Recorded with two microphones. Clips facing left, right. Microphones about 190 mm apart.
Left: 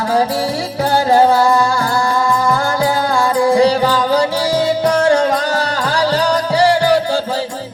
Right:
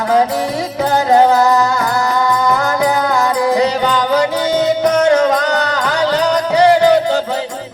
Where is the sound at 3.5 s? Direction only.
20° right (ahead or behind).